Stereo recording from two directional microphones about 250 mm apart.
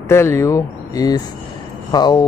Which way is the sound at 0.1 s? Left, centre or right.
Centre.